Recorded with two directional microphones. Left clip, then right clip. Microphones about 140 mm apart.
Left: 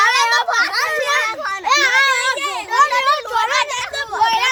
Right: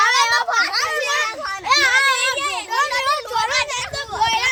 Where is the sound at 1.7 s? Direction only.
10° left (ahead or behind).